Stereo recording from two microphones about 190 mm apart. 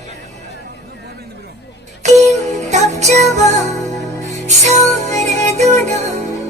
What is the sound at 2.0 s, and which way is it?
Music, 40° right (ahead or behind).